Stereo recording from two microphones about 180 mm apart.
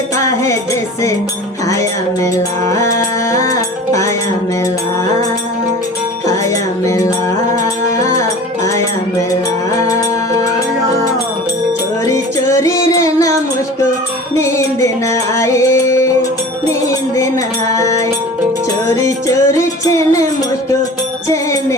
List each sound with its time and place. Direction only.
1.7 s music: 20° left (ahead or behind)
6.8 s music: 15° left (ahead or behind)
12.0 s music: 15° left (ahead or behind)
14.3 s music: 15° left (ahead or behind)
17.7 s music: 15° left (ahead or behind)
21.2 s music: 20° left (ahead or behind)